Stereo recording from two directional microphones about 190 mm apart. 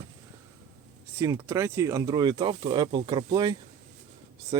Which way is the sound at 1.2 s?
15° right (ahead or behind).